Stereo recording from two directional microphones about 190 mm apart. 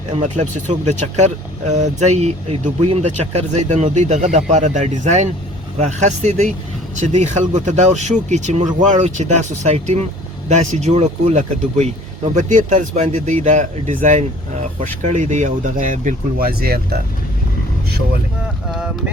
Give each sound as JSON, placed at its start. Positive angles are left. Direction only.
{"t": 0.1, "sound": "speech", "side_deg": -40}
{"t": 18.7, "sound": "speech", "side_deg": -5}